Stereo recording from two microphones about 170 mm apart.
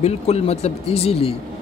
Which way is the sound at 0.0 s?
40° left (ahead or behind).